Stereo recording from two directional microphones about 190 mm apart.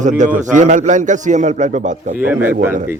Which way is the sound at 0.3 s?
40° right (ahead or behind).